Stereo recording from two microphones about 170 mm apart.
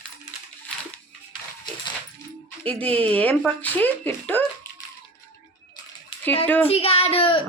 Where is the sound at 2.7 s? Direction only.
10° left (ahead or behind).